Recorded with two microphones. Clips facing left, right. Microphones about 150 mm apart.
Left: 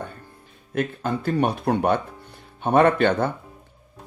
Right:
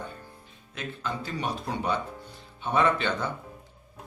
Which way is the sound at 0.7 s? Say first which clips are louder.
Left 9 dB; 55° left (ahead or behind).